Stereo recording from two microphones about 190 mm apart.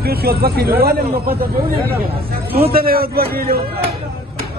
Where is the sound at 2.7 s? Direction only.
50° right (ahead or behind).